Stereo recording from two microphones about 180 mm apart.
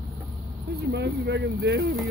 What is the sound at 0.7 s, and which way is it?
Speech, 65° right (ahead or behind).